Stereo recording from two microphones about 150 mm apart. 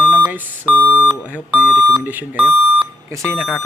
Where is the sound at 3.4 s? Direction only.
5° right (ahead or behind).